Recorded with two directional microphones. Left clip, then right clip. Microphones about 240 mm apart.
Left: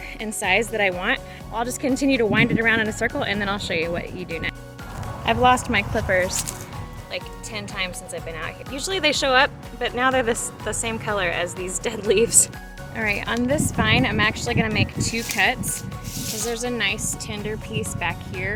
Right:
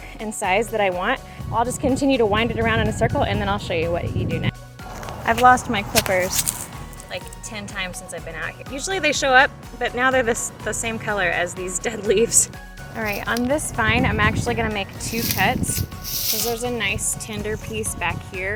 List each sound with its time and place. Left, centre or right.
0.2 s speech: centre